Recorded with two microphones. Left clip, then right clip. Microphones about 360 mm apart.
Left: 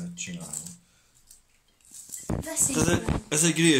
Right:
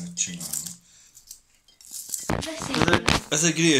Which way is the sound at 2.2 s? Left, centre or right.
Right.